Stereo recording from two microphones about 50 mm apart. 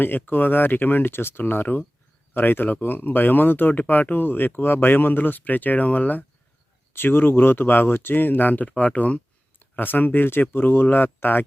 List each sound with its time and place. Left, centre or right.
0.0 s speech: left
6.9 s speech: left
9.6 s speech: left